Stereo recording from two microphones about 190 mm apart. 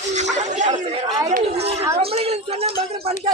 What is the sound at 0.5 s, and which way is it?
Chatter, 40° right (ahead or behind).